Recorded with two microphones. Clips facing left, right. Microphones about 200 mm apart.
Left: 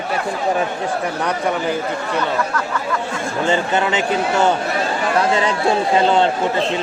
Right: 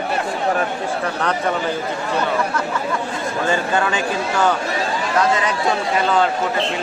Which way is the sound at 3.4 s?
20° left (ahead or behind).